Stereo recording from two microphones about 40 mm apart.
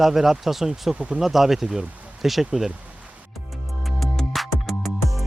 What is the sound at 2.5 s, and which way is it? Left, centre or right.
Speech, centre.